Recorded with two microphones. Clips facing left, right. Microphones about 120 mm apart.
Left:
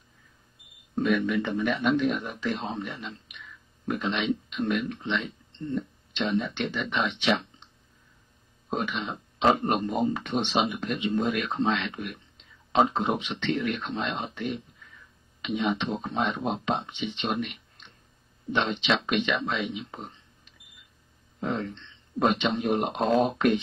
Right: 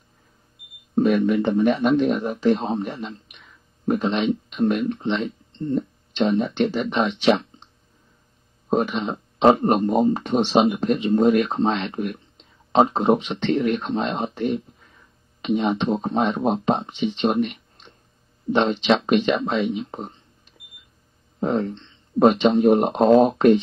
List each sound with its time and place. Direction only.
0.9 s speech: 35° right (ahead or behind)
21.4 s speech: 40° right (ahead or behind)